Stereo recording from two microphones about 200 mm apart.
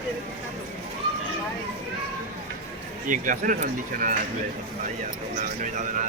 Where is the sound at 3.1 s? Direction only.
40° right (ahead or behind).